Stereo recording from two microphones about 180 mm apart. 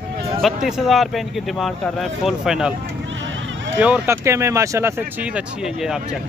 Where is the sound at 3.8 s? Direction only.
10° right (ahead or behind).